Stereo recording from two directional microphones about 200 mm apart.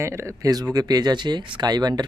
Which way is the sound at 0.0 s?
15° right (ahead or behind).